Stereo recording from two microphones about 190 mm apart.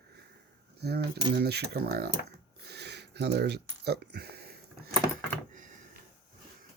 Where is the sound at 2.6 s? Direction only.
60° right (ahead or behind).